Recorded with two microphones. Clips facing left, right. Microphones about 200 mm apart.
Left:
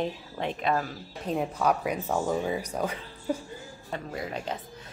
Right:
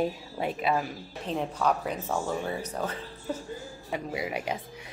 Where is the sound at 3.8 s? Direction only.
10° right (ahead or behind).